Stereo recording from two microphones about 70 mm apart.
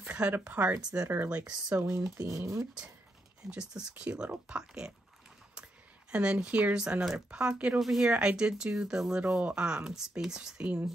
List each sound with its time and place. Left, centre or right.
0.4 s speech: right
1.4 s speech: right
1.8 s speech: right
3.4 s speech: centre
6.1 s speech: centre
7.8 s speech: centre
8.1 s speech: centre